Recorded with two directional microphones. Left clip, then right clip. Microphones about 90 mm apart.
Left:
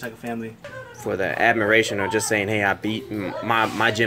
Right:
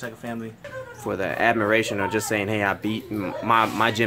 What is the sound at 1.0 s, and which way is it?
A child's voice, 5° right (ahead or behind).